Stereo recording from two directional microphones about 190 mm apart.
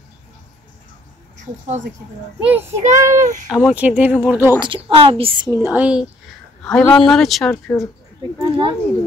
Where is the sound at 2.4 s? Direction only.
5° right (ahead or behind).